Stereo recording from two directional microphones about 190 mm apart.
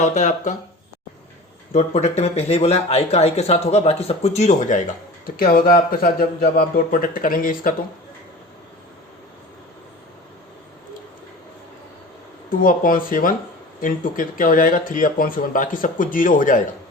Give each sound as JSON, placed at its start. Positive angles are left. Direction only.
{"t": 0.0, "sound": "speech", "side_deg": 40}
{"t": 1.7, "sound": "speech", "side_deg": 35}
{"t": 5.2, "sound": "speech", "side_deg": 50}
{"t": 12.5, "sound": "speech", "side_deg": 45}